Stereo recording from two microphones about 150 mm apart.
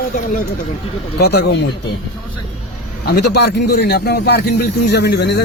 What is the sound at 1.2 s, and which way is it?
Speech, 90° left.